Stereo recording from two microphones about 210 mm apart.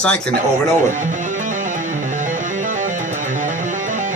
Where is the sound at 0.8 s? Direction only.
35° right (ahead or behind).